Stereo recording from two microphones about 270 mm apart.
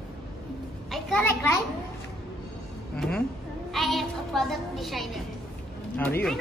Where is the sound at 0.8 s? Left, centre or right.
Centre.